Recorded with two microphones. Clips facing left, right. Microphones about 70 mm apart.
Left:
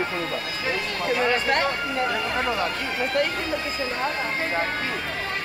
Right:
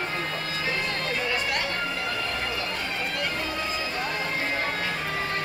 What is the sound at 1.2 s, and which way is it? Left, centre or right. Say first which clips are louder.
Speech: left 8 dB; left.